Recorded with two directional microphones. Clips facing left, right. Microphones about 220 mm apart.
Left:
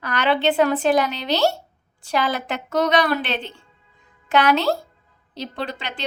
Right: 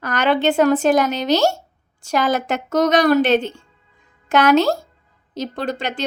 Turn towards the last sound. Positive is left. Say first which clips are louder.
# right 6 dB
turn(degrees=-45)  # may be behind; listen again after turning